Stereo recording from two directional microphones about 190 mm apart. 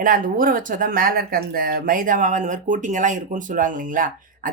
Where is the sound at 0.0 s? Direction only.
45° right (ahead or behind).